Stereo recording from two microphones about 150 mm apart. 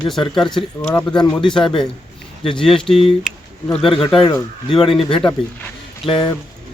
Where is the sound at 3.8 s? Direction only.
35° left (ahead or behind).